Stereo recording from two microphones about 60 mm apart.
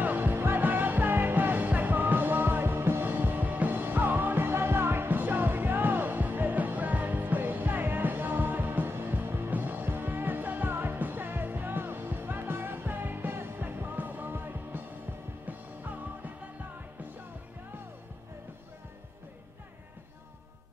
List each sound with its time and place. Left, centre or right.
0.0 s music: right